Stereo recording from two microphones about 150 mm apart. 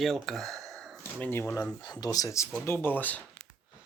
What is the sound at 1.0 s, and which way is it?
Speech, 15° left (ahead or behind).